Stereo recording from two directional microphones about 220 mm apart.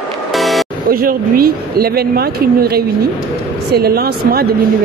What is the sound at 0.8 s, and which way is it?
Speech, 40° right (ahead or behind).